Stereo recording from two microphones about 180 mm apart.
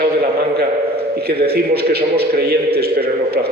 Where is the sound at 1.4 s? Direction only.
60° right (ahead or behind).